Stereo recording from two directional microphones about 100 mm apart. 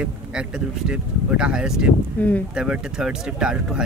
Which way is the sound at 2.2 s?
15° left (ahead or behind).